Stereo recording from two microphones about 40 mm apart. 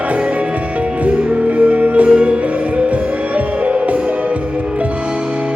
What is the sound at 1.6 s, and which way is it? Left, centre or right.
Music, right.